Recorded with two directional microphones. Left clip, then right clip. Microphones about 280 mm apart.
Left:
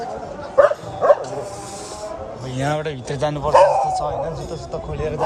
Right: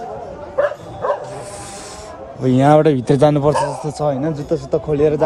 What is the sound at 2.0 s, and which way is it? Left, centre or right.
A man's voice, centre.